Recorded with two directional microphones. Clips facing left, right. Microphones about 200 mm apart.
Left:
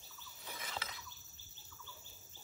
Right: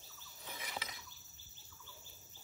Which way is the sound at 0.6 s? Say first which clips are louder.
Even; 15° right (ahead or behind).